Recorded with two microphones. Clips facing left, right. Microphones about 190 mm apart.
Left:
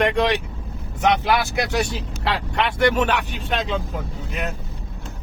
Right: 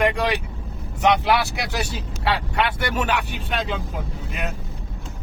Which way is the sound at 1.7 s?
5° right (ahead or behind).